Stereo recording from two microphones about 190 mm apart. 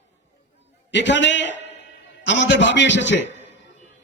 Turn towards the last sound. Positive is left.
turn(degrees=70)  # may be behind; listen again after turning